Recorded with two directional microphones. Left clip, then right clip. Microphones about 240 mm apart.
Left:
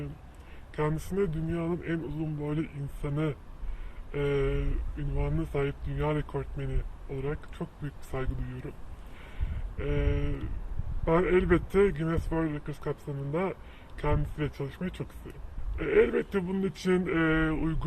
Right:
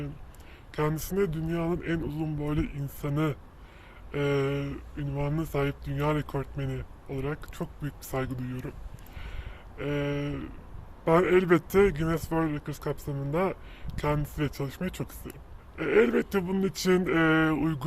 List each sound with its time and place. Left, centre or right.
0.8 s speech: right
9.2 s a sound: right
11.0 s speech: right